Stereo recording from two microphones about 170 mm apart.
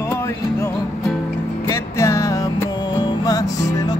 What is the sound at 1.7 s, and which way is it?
Music, 15° left (ahead or behind).